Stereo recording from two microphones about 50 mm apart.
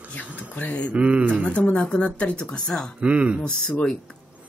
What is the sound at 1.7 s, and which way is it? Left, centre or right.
A woman's voice, left.